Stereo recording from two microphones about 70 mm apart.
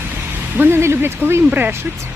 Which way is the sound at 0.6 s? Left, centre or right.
Right.